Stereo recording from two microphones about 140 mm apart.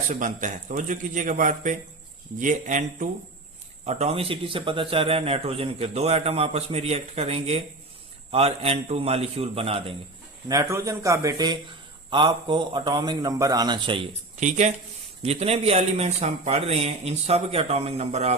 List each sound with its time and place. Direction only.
0.1 s speech: 65° right (ahead or behind)
3.8 s a man's voice: 50° right (ahead or behind)
10.5 s a man's voice: 20° right (ahead or behind); by 14.1 s 35° right (ahead or behind)
14.3 s speech: 60° right (ahead or behind)
15.2 s a man's voice: 45° right (ahead or behind)